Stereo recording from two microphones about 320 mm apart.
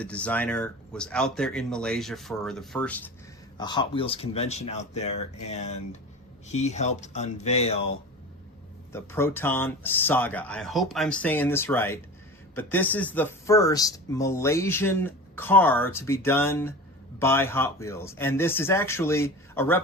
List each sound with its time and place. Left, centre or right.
0.0 s speech: centre
8.9 s speech: centre